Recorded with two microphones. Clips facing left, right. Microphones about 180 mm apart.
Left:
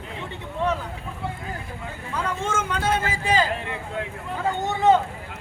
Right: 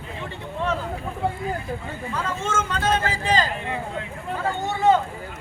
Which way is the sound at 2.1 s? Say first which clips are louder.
Even; 15° left (ahead or behind).